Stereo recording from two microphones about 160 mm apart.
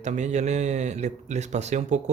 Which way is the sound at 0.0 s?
45° right (ahead or behind).